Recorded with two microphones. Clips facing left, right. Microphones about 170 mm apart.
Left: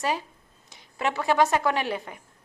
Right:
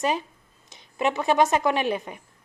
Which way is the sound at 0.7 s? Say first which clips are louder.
Right 3 dB; 20° right (ahead or behind).